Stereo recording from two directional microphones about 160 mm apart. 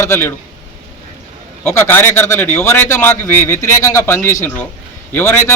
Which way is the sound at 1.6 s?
15° left (ahead or behind).